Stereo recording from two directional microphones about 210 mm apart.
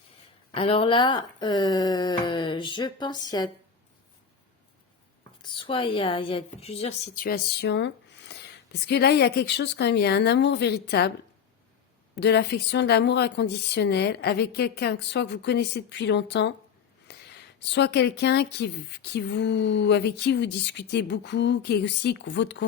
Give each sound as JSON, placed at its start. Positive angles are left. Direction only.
{"t": 0.5, "sound": "speech", "side_deg": 25}
{"t": 5.4, "sound": "speech", "side_deg": 25}
{"t": 7.2, "sound": "speech", "side_deg": 45}
{"t": 12.1, "sound": "speech", "side_deg": 55}